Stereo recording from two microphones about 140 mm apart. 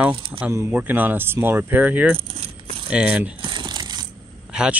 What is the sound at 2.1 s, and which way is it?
Keys jangling, 40° right (ahead or behind).